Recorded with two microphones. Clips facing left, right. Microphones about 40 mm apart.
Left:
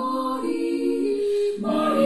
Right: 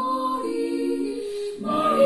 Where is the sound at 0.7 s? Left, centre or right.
Centre.